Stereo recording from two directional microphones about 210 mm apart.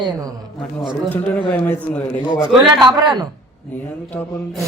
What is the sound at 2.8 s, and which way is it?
Speech, 20° right (ahead or behind).